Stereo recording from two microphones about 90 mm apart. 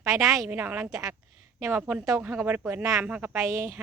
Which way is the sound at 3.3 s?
30° right (ahead or behind).